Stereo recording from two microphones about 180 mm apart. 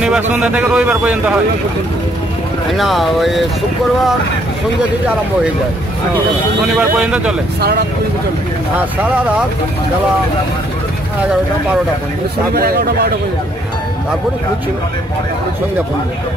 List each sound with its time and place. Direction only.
0.0 s a man's voice: 5° right (ahead or behind)
2.7 s speech: centre (ahead or behind)
6.7 s speech: 5° right (ahead or behind)
12.5 s speech: 60° right (ahead or behind)